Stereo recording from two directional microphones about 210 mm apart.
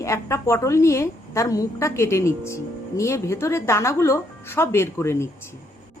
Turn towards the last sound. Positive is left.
turn(degrees=10)  # may be behind; listen again after turning